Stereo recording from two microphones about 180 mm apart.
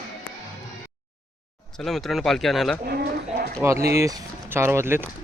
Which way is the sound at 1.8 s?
Centre (ahead or behind).